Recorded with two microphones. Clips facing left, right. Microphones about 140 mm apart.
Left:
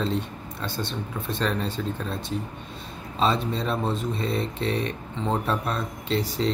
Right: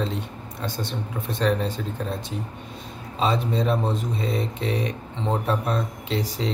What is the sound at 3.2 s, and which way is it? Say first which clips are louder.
Speech: right 1 dB; 15° right (ahead or behind).